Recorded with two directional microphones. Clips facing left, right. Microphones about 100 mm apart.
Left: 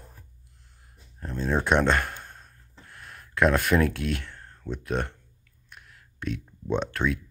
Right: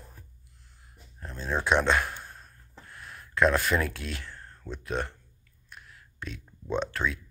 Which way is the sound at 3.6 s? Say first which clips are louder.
Left 5 dB; 60° left (ahead or behind).